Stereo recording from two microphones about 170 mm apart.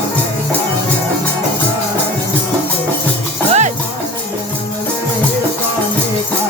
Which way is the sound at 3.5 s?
45° right (ahead or behind).